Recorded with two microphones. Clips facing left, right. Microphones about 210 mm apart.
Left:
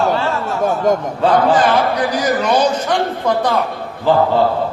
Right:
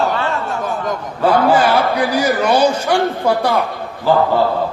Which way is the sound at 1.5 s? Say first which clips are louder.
Even; 10° right (ahead or behind).